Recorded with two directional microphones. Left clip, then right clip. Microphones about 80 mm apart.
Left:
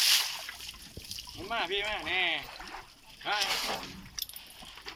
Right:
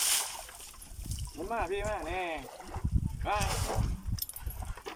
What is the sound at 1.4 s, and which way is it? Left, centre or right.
Speech, right.